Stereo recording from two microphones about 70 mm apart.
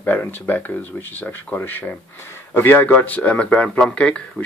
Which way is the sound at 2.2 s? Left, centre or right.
Left.